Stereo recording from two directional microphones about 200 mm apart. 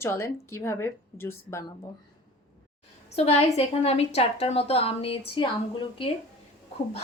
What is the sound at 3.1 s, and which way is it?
A woman's voice, 30° left (ahead or behind).